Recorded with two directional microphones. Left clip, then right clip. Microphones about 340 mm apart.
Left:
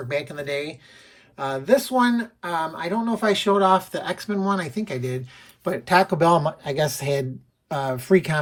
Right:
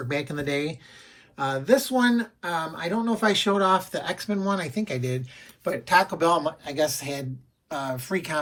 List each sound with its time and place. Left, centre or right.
0.1 s speech: centre